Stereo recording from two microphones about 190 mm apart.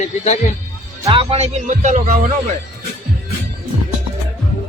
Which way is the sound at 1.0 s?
30° right (ahead or behind).